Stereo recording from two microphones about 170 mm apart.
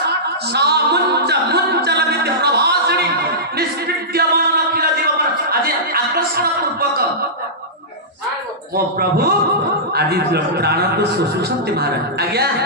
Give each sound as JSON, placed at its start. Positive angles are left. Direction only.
{"t": 0.5, "sound": "music", "side_deg": -75}
{"t": 3.5, "sound": "a capella", "side_deg": -65}
{"t": 4.7, "sound": "a sound", "side_deg": -65}
{"t": 8.7, "sound": "a man's voice", "side_deg": -65}